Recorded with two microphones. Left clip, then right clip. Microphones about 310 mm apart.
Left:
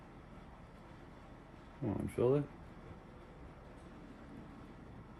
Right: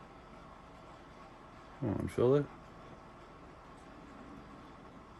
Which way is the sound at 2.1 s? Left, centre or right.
Right.